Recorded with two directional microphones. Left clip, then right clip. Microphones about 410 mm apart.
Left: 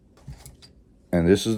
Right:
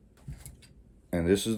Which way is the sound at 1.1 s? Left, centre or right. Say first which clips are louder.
Left 6 dB; left.